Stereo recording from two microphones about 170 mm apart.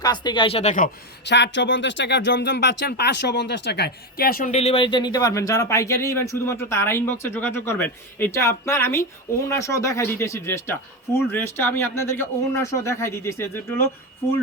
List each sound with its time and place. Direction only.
0.0 s speech: 25° left (ahead or behind); by 0.9 s 45° left (ahead or behind)
1.2 s speech: 90° left; by 4.5 s 55° left (ahead or behind)
4.5 s speech: 35° left (ahead or behind); by 13.8 s 15° left (ahead or behind)